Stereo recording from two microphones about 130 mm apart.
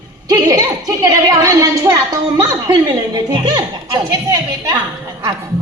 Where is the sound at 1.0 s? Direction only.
30° right (ahead or behind).